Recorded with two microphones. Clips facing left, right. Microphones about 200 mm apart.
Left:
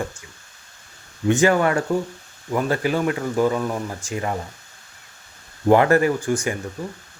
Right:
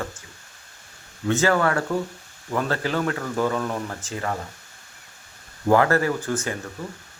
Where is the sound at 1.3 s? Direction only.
15° left (ahead or behind).